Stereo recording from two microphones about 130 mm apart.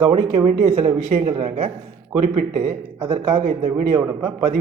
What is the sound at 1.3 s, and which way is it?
Speech, 45° right (ahead or behind).